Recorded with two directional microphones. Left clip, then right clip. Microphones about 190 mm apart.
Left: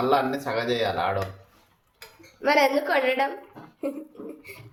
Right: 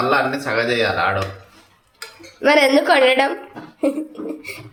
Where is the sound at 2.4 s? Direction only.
20° right (ahead or behind).